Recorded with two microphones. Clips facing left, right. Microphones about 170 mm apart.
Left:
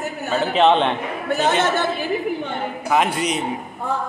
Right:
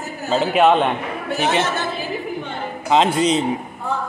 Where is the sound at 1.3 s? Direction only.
20° right (ahead or behind).